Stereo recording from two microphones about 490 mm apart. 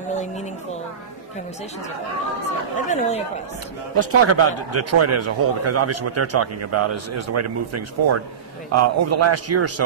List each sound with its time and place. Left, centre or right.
2.9 s speech: centre
3.9 s a man's voice: right